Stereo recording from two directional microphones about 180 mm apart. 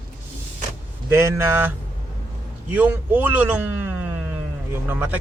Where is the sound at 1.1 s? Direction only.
15° right (ahead or behind).